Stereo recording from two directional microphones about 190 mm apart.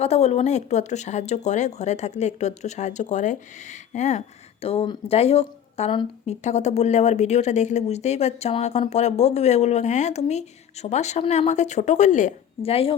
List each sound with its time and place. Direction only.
0.0 s speech: 35° left (ahead or behind)